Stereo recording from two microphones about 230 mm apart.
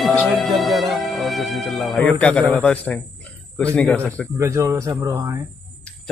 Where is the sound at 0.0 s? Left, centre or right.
Centre.